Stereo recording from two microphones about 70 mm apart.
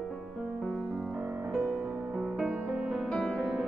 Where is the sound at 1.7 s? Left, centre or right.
Centre.